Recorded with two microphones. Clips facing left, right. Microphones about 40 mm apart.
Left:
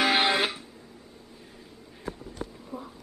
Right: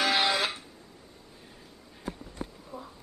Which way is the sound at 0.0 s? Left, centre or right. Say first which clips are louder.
Left 3 dB; left.